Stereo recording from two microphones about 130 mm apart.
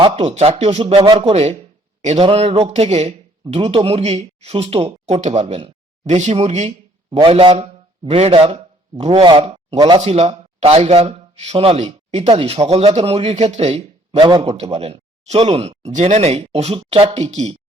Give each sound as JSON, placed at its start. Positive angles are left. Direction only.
{"t": 0.2, "sound": "speech", "side_deg": -55}
{"t": 0.9, "sound": "speech", "side_deg": -35}
{"t": 1.3, "sound": "speech", "side_deg": -50}
{"t": 7.2, "sound": "speech", "side_deg": -40}
{"t": 9.2, "sound": "speech", "side_deg": -40}
{"t": 9.7, "sound": "speech", "side_deg": -30}
{"t": 10.0, "sound": "speech", "side_deg": -50}